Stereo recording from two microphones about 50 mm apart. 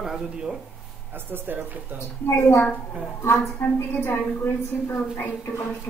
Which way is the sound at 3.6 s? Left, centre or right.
Left.